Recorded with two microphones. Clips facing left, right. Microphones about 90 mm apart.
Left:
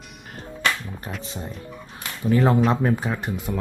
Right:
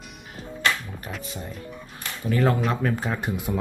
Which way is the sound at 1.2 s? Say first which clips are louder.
Left 1 dB; 25° left (ahead or behind).